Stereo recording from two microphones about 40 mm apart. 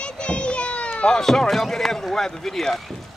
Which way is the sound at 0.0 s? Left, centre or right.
Left.